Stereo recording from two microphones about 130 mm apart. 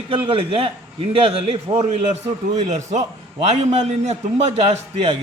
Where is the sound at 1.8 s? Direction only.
60° right (ahead or behind).